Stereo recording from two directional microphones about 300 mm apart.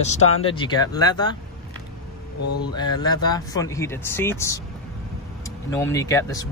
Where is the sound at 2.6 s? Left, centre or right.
Centre.